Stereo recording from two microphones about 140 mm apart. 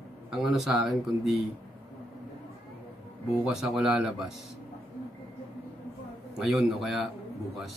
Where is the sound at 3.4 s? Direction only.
5° right (ahead or behind).